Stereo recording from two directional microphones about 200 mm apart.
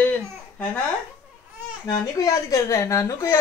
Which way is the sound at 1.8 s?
15° left (ahead or behind).